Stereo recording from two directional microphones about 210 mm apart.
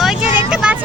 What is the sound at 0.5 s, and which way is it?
Speech, 5° right (ahead or behind).